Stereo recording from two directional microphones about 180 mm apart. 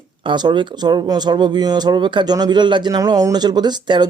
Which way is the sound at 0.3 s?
25° right (ahead or behind).